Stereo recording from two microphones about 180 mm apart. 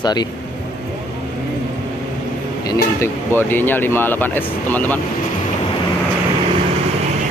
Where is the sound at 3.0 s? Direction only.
10° left (ahead or behind).